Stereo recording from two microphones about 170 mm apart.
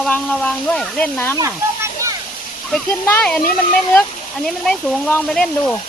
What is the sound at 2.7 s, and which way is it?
Speech, 10° left (ahead or behind).